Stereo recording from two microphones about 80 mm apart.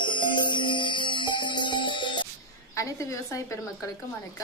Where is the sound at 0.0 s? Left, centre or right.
Left.